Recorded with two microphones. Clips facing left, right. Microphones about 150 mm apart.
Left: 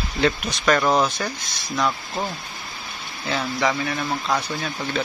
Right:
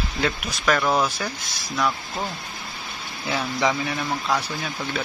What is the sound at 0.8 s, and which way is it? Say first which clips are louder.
Speech: left 2 dB; 5° left (ahead or behind).